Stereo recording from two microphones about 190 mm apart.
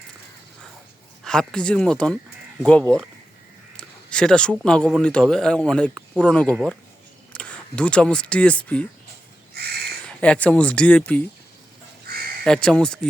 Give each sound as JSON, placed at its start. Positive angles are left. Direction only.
{"t": 1.2, "sound": "speech", "side_deg": 5}
{"t": 3.8, "sound": "speech", "side_deg": 5}
{"t": 9.6, "sound": "a sound", "side_deg": -55}
{"t": 10.2, "sound": "speech", "side_deg": 5}
{"t": 12.5, "sound": "speech", "side_deg": 5}